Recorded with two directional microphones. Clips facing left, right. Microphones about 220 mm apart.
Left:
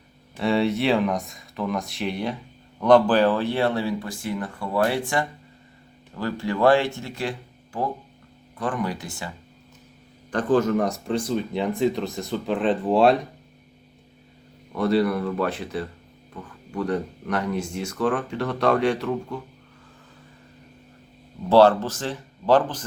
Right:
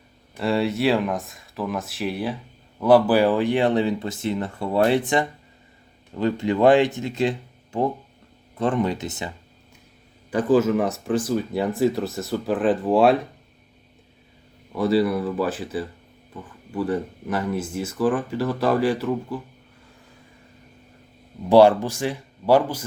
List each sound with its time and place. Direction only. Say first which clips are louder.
0.3 s speech: even; centre (ahead or behind); by 9.3 s 20° right (ahead or behind)
10.3 s speech: right 2 dB; 5° right (ahead or behind)
14.8 s speech: right 1 dB; centre (ahead or behind)
21.5 s speech: right 2 dB; 15° right (ahead or behind)